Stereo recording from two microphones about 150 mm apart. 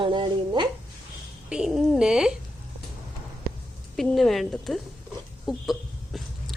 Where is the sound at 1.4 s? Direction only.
5° right (ahead or behind).